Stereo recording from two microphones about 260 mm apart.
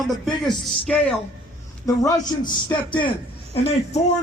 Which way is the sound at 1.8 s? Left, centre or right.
Centre.